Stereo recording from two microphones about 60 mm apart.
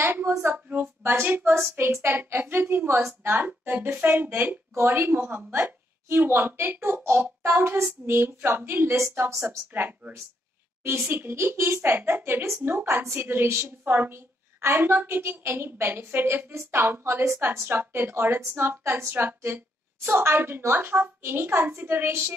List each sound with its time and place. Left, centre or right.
0.7 s speech: right
1.8 s a woman's voice: right
9.7 s speech: right
17.0 s a woman's voice: right
17.6 s speech: right